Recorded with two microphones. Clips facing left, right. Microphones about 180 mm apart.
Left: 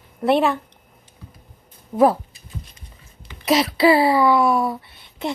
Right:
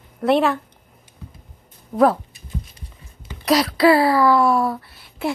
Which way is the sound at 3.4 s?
Centre (ahead or behind).